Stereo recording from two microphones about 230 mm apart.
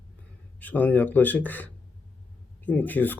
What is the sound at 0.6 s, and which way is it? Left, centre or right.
Speech, centre.